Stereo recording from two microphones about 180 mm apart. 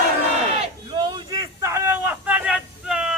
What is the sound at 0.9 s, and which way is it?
Vehicle, 20° right (ahead or behind).